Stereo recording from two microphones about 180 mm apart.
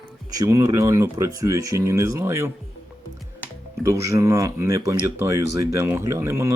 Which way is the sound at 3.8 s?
15° right (ahead or behind).